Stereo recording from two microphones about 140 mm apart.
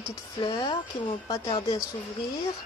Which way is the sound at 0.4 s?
30° left (ahead or behind).